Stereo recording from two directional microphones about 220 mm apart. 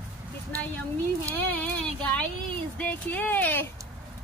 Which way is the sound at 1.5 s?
5° left (ahead or behind).